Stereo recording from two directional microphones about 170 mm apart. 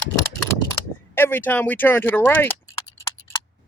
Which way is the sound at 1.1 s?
10° left (ahead or behind).